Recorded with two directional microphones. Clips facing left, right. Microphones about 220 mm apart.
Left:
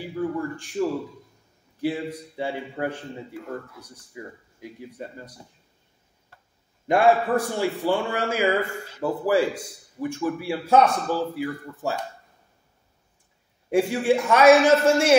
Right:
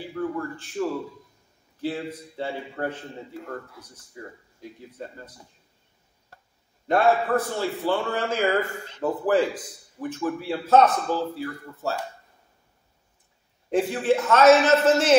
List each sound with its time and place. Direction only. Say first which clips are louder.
0.0 s a sound: left 2 dB; 15° left (ahead or behind)
1.8 s speech: left 3 dB; 15° left (ahead or behind)
4.1 s speech: left 2 dB; 15° left (ahead or behind)
6.3 s a sound: right 3 dB; 40° right (ahead or behind)
6.9 s speech: left 2 dB; 15° left (ahead or behind)
13.7 s speech: left 1 dB; 10° left (ahead or behind)